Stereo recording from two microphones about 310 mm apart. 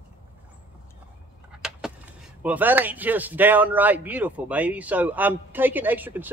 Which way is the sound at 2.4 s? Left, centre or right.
Centre.